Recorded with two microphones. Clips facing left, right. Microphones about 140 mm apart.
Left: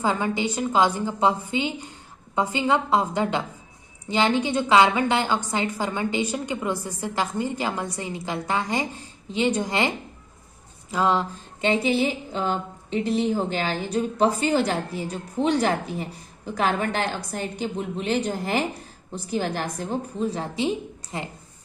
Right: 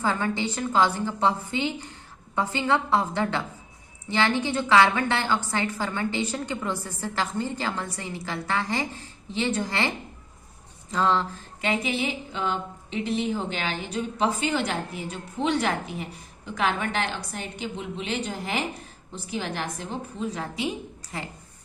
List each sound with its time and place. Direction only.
0.0 s a woman's voice: 15° left (ahead or behind)
10.9 s a woman's voice: 15° left (ahead or behind)
11.6 s a woman's voice: 30° left (ahead or behind)